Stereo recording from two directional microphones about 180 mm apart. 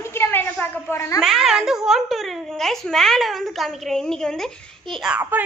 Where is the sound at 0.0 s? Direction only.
15° left (ahead or behind).